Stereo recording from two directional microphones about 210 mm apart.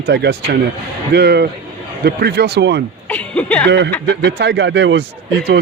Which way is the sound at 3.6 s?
55° right (ahead or behind).